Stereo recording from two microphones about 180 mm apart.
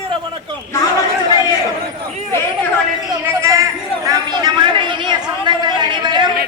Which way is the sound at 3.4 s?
15° right (ahead or behind).